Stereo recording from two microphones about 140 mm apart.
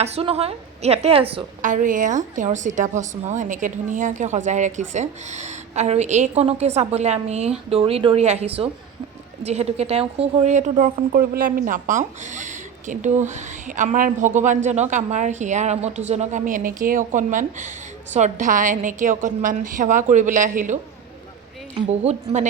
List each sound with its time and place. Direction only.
0.0 s a woman's voice: 45° right (ahead or behind)
1.6 s a woman's voice: 65° right (ahead or behind)
21.8 s a woman's voice: 50° right (ahead or behind)